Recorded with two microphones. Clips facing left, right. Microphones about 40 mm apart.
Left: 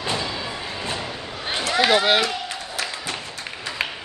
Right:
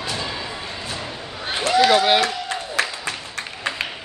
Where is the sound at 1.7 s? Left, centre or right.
Centre.